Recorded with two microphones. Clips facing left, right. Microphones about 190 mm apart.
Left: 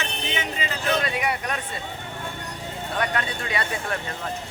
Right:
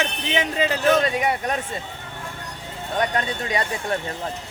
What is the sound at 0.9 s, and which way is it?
Speech, 40° right (ahead or behind).